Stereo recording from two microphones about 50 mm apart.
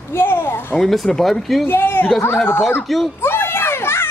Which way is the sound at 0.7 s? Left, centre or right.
Centre.